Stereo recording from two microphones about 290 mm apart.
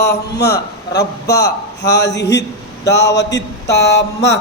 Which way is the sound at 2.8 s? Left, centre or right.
Left.